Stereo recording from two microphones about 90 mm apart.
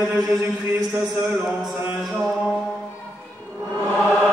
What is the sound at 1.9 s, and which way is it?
Mantra, centre (ahead or behind).